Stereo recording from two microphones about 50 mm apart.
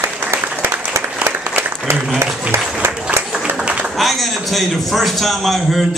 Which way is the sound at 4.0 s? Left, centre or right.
Centre.